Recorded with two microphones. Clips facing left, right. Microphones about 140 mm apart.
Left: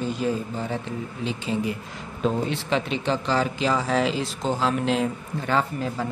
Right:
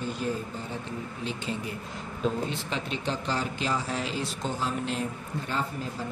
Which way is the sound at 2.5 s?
90° left.